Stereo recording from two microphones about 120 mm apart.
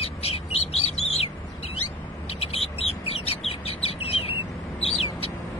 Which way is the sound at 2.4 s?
55° left (ahead or behind).